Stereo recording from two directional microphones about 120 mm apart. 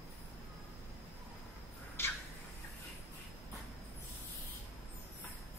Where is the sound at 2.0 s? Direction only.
20° left (ahead or behind).